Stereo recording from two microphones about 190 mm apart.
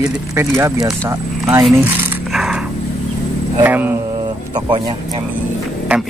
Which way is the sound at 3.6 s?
10° right (ahead or behind).